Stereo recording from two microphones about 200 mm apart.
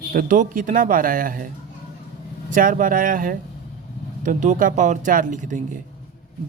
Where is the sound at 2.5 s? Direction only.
40° right (ahead or behind).